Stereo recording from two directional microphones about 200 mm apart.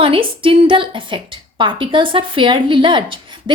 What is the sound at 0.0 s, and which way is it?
A woman's voice, 25° right (ahead or behind).